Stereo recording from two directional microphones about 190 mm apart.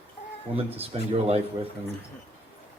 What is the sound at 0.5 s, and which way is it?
Speech, 30° right (ahead or behind).